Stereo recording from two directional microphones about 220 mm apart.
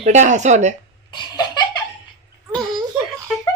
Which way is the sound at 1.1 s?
20° left (ahead or behind).